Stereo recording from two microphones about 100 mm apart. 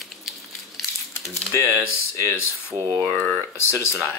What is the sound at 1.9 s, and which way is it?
Speech, 25° left (ahead or behind).